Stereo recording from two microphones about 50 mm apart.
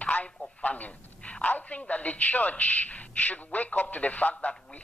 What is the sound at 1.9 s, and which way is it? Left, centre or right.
A man's voice, left.